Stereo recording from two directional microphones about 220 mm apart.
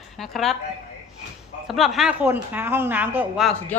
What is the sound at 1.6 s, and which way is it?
Speech, centre (ahead or behind).